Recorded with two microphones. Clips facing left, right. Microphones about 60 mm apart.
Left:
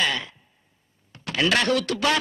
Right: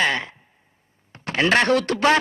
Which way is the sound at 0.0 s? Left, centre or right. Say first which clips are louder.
Right 4 dB; right.